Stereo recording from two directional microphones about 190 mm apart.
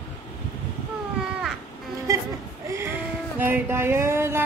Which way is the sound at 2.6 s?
15° right (ahead or behind).